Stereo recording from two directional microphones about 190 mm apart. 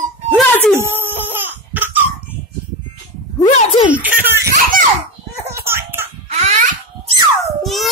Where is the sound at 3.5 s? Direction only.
35° left (ahead or behind).